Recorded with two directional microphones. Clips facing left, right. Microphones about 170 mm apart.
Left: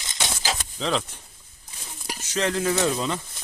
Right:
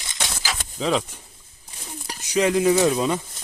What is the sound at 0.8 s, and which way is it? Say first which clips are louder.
Speech: right 5 dB; 5° right (ahead or behind).